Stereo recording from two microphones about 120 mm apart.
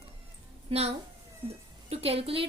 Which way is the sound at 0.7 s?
60° right (ahead or behind).